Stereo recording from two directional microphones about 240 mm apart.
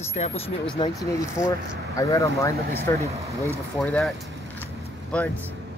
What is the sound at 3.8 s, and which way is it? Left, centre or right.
Speech, centre.